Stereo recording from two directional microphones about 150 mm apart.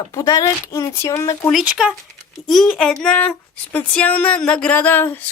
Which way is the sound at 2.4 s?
Centre (ahead or behind).